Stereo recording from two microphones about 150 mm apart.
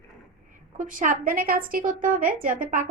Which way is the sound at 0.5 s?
60° right (ahead or behind).